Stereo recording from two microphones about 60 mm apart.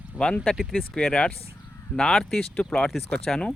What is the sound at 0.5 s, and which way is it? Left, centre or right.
Speech, centre.